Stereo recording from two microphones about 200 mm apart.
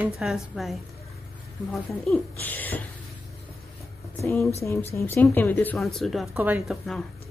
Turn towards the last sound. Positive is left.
turn(degrees=0)  # may be behind; listen again after turning